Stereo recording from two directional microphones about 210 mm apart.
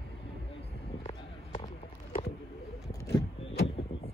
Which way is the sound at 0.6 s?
30° left (ahead or behind).